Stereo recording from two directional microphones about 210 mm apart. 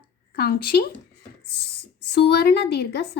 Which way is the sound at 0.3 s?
45° left (ahead or behind).